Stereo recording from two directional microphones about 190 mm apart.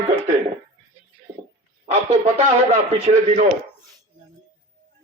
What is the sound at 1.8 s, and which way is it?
Speech, 35° right (ahead or behind).